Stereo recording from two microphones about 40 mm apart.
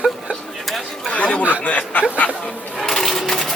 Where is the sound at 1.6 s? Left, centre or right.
Left.